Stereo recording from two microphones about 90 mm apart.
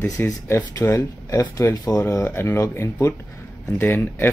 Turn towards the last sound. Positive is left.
turn(degrees=20)  # may be behind; listen again after turning